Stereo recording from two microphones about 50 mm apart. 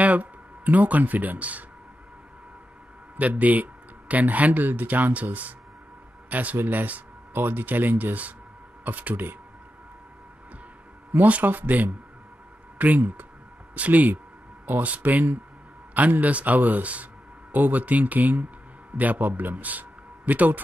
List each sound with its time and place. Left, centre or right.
0.0 s speech: right
3.2 s speech: right
11.1 s speech: right